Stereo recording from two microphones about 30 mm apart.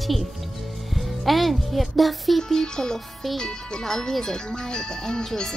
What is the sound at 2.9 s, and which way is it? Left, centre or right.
Speech, centre.